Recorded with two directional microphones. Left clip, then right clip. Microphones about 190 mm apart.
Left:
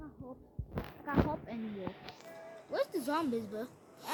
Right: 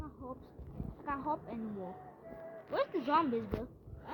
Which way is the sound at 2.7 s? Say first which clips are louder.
Right 2 dB; 55° left (ahead or behind).